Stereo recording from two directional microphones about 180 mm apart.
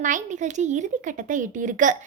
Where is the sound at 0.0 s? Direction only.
45° right (ahead or behind).